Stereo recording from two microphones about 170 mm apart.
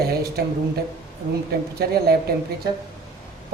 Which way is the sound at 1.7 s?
65° right (ahead or behind).